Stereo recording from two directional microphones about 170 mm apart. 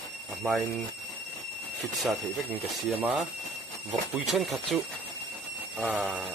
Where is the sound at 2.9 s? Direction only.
5° right (ahead or behind).